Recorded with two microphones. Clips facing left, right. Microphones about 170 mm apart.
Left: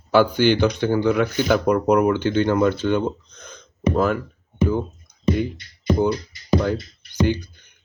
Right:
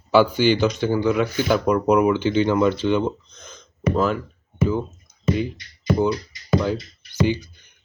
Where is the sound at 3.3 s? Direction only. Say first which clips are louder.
Left 2 dB; 60° left (ahead or behind).